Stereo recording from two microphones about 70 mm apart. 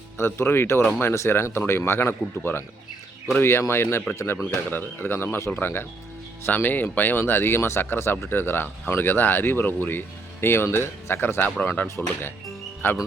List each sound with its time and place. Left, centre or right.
0.2 s speech: left
4.5 s speech: left
11.9 s speech: left